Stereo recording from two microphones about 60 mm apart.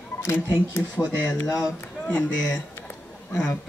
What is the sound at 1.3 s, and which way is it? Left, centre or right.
Speech, left.